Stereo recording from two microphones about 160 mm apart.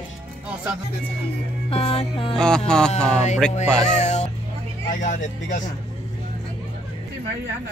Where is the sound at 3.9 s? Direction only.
45° left (ahead or behind).